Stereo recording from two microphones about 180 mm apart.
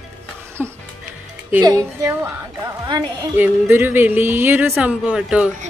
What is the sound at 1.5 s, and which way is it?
A woman's voice, 15° right (ahead or behind).